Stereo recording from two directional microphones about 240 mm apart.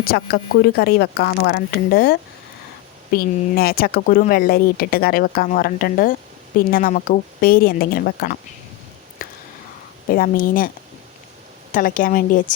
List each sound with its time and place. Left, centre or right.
0.0 s speech: left
9.2 s a sound: left
10.1 s speech: left
11.7 s speech: left